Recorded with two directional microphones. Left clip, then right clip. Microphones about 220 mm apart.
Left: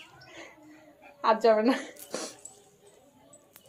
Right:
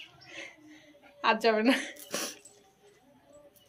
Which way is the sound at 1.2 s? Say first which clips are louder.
Left 3 dB; 50° right (ahead or behind).